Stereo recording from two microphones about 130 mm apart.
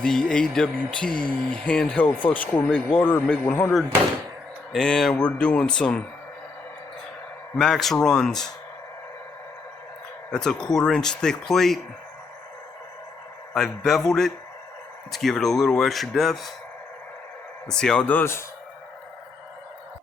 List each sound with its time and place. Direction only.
0.0 s speech: 5° left (ahead or behind)
4.7 s speech: 5° left (ahead or behind)
7.5 s speech: 5° left (ahead or behind)
10.3 s speech: 5° left (ahead or behind)
13.5 s speech: 5° left (ahead or behind)
17.7 s speech: 5° left (ahead or behind)